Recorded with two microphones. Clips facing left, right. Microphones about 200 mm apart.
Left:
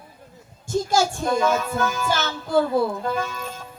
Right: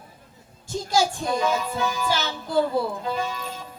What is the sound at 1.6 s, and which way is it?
Music, 50° left (ahead or behind).